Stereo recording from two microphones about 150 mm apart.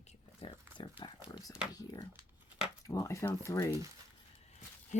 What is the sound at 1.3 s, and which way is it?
Speech, 25° left (ahead or behind).